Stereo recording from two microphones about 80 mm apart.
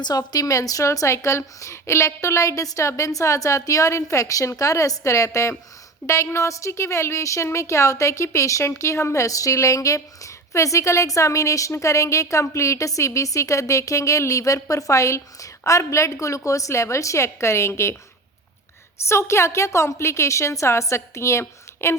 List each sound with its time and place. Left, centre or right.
0.0 s a woman's voice: left
19.0 s a woman's voice: left